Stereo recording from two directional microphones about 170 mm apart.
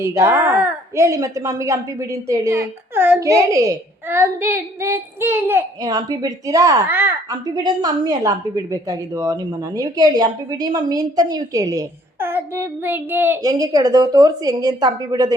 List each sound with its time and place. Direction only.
0.0 s a woman's voice: 15° right (ahead or behind)
7.3 s a woman's voice: 25° right (ahead or behind)